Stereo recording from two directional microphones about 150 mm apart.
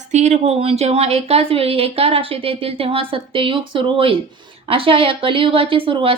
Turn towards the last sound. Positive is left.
turn(degrees=-35)  # may be behind; listen again after turning